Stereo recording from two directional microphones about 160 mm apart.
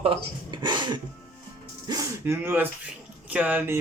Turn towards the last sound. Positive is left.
turn(degrees=-10)  # may be behind; listen again after turning